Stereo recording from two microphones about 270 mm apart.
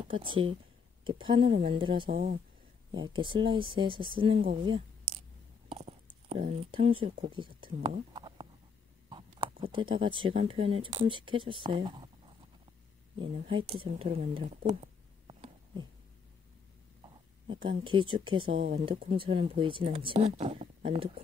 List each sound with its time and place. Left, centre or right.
0.0 s speech: centre
2.0 s speech: right
2.9 s speech: centre
5.7 s a sound: centre
6.7 s speech: centre
13.2 s speech: centre
15.2 s a sound: centre
17.0 s speech: centre